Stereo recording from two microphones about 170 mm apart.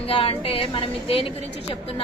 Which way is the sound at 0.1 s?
35° left (ahead or behind).